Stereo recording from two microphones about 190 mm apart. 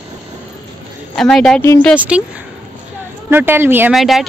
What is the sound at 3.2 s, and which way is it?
Speech, 10° right (ahead or behind).